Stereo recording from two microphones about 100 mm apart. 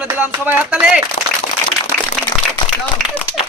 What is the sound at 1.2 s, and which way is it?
Speech, 90° left.